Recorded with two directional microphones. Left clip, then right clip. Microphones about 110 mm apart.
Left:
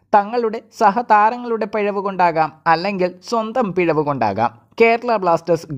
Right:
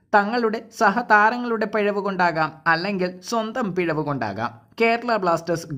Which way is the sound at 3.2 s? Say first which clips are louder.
Left 5 dB; 20° left (ahead or behind).